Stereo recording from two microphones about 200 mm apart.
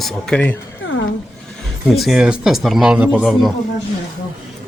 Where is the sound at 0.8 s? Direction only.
75° left (ahead or behind).